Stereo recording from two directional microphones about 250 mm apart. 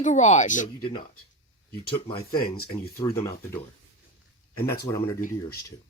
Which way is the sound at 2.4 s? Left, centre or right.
Left.